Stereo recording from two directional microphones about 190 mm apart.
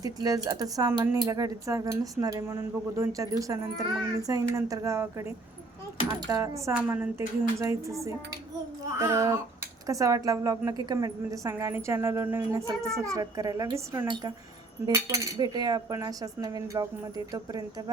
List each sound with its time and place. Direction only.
0.0 s speech: 20° right (ahead or behind)